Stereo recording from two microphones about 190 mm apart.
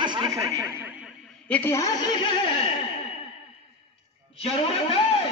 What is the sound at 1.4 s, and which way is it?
Speech, 10° left (ahead or behind).